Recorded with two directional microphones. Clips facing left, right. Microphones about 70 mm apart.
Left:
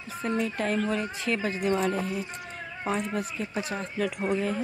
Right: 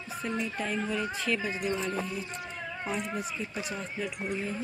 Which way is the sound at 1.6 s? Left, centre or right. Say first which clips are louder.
Left 5 dB; left.